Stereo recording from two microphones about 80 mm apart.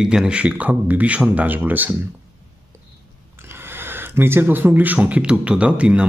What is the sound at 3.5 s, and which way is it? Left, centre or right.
Speech, right.